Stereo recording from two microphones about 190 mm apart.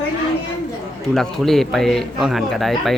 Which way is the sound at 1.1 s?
Centre (ahead or behind).